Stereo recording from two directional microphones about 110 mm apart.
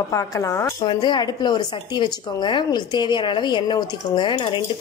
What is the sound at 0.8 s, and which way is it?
Speech, 45° left (ahead or behind).